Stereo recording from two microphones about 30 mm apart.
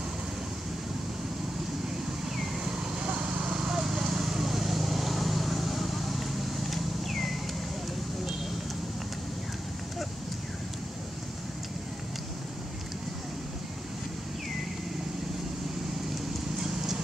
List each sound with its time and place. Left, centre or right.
2.2 s vehicle: centre
3.0 s a sound: right
3.5 s vehicle: centre
16.5 s clip-clop: centre